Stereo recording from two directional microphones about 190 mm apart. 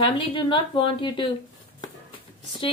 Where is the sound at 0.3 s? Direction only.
25° left (ahead or behind).